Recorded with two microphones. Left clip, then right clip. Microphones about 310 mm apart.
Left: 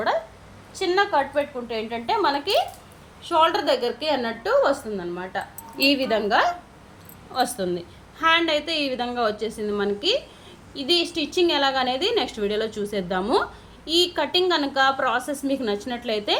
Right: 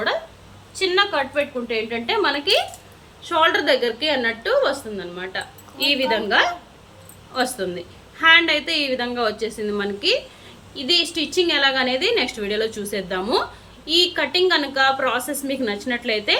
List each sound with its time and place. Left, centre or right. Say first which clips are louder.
0.8 s a woman's voice: right 2 dB; left
7.3 s a woman's voice: right 1 dB; left